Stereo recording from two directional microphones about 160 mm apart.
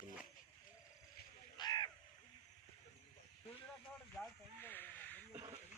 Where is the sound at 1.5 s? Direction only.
25° left (ahead or behind).